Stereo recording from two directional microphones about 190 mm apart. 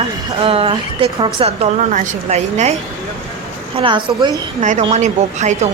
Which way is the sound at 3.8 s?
25° right (ahead or behind).